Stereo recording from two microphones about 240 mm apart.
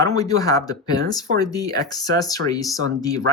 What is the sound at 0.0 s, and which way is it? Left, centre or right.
Speech, centre.